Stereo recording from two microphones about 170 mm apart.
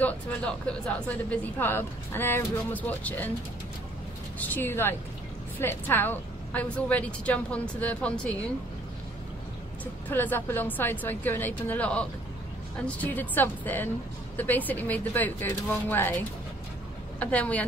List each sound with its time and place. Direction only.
0.0 s speech: 5° left (ahead or behind)
4.4 s speech: 10° left (ahead or behind)
10.0 s speech: 10° left (ahead or behind)